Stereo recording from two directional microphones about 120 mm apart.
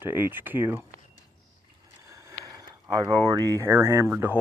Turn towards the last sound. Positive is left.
turn(degrees=-20)  # may be behind; listen again after turning